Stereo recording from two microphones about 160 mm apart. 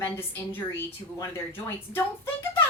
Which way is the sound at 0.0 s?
15° left (ahead or behind).